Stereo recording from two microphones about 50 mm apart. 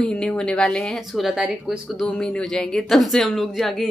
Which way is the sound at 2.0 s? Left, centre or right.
Left.